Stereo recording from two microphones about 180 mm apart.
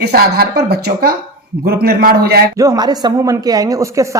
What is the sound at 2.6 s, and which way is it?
Speech, 20° right (ahead or behind).